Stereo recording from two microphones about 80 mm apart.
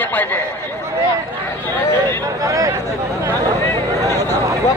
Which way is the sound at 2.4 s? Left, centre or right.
Right.